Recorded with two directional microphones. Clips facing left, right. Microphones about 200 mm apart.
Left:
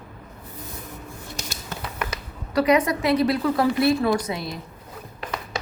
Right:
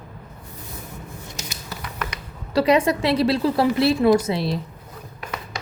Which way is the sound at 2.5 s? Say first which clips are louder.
Right 2 dB; 30° right (ahead or behind).